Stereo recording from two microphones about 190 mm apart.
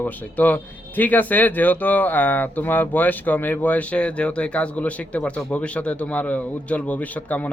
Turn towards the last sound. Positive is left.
turn(degrees=10)  # may be behind; listen again after turning